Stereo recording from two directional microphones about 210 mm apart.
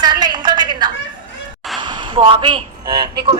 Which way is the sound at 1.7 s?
20° right (ahead or behind).